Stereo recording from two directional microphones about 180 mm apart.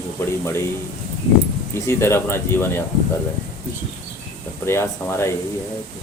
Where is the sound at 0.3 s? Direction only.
15° left (ahead or behind).